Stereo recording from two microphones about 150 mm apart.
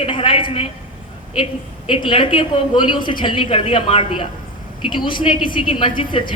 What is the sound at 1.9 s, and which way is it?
A woman's voice, 35° left (ahead or behind).